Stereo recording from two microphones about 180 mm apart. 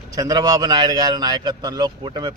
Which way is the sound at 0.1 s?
20° right (ahead or behind).